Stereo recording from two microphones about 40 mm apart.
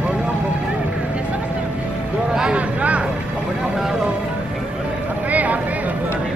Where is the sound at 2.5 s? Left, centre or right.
Right.